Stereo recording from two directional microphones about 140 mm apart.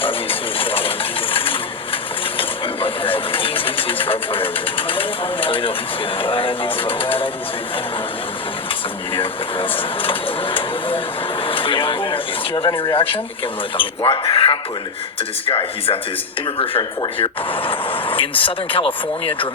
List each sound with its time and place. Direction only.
0.0 s a sound: 40° left (ahead or behind)
2.4 s vehicle: 40° left (ahead or behind)
4.9 s speech: 40° left (ahead or behind)
9.1 s speech: 40° left (ahead or behind)